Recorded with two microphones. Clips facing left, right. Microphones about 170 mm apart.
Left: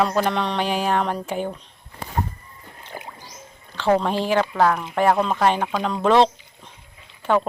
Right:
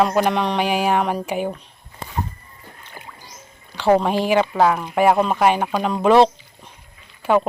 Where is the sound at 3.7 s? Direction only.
10° right (ahead or behind).